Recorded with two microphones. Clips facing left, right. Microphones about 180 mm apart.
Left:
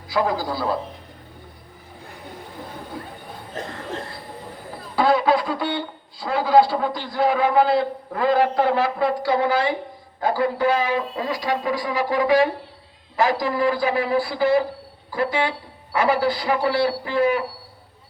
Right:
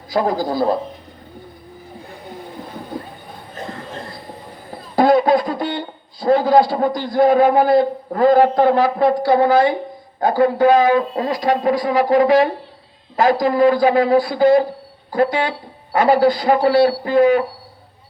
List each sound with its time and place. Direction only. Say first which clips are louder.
0.1 s a man's voice: right 4 dB; 45° right (ahead or behind)
4.9 s a man's voice: right 5 dB; 45° right (ahead or behind)